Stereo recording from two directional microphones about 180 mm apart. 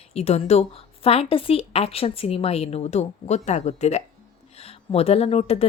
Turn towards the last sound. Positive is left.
turn(degrees=35)  # may be behind; listen again after turning